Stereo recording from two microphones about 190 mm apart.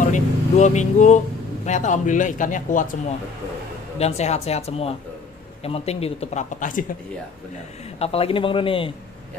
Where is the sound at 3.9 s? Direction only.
35° left (ahead or behind).